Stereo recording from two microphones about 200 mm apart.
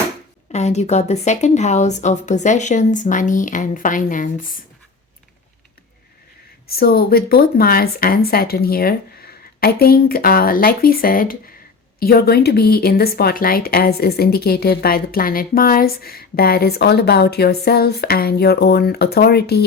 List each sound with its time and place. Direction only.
0.5 s speech: 35° left (ahead or behind)
6.7 s speech: 50° left (ahead or behind)